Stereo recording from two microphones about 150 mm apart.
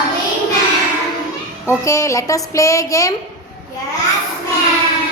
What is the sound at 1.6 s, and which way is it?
A woman's voice, 20° left (ahead or behind).